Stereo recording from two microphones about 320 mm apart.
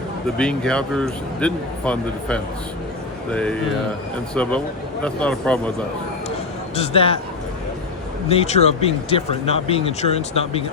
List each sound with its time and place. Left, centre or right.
0.3 s speech: centre
6.7 s speech: centre
8.3 s speech: centre